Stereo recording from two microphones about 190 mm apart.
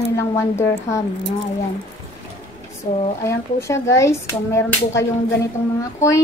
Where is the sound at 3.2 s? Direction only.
15° left (ahead or behind).